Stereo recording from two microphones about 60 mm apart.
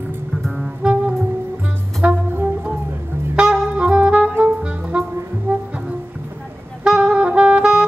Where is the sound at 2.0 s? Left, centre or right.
Right.